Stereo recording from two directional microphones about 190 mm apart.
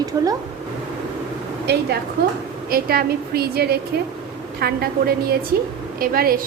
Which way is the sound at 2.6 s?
55° right (ahead or behind).